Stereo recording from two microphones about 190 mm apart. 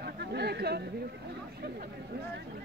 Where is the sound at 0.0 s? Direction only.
60° right (ahead or behind).